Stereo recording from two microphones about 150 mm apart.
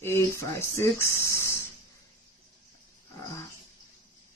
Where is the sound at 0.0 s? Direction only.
15° left (ahead or behind).